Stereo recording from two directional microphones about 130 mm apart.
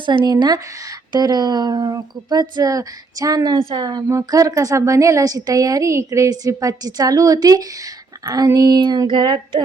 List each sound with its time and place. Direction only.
0.0 s a woman's voice: 35° right (ahead or behind)